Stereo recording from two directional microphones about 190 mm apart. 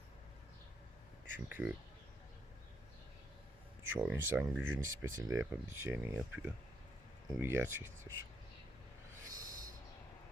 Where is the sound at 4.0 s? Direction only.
10° right (ahead or behind).